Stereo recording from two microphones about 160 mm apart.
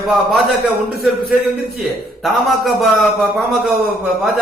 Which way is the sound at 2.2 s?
Centre (ahead or behind).